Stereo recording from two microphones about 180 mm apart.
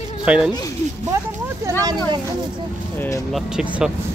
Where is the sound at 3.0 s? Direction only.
15° left (ahead or behind).